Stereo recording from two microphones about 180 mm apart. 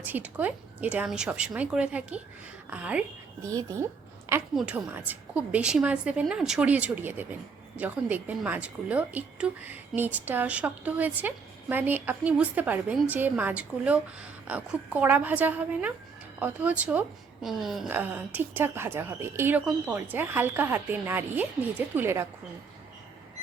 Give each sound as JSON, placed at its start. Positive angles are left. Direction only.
{"t": 0.0, "sound": "a woman's voice", "side_deg": -10}
{"t": 3.5, "sound": "speech", "side_deg": -20}
{"t": 4.5, "sound": "a woman's voice", "side_deg": -10}